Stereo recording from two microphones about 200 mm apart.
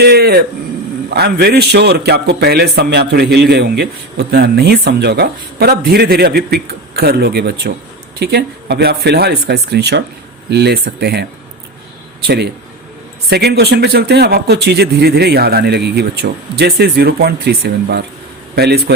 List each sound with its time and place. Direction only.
0.0 s a man's voice: 55° right (ahead or behind)
13.3 s a man's voice: 55° right (ahead or behind)